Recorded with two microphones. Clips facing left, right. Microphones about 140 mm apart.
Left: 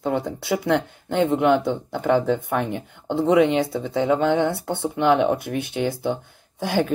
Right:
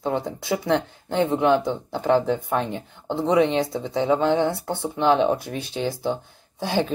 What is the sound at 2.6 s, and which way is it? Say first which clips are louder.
Speech: left 2 dB; 15° left (ahead or behind).